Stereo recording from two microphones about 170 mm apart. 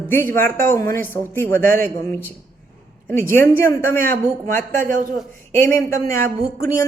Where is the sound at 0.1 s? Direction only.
10° left (ahead or behind).